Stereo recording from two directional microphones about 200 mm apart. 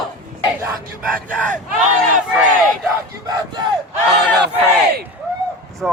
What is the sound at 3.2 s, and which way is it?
Crowd, 20° right (ahead or behind).